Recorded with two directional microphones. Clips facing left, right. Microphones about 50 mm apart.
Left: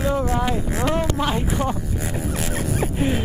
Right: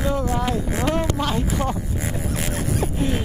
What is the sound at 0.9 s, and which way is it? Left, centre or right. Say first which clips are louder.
Speech: left 1 dB; centre.